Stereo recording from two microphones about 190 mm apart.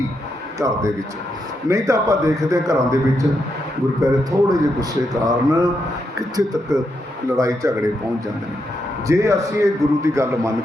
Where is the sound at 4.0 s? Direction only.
15° right (ahead or behind).